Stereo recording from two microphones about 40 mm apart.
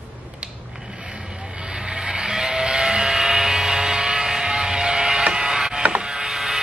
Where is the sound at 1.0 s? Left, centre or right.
Centre.